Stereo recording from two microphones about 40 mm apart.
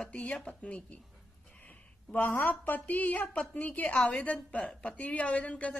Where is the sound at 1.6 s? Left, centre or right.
Left.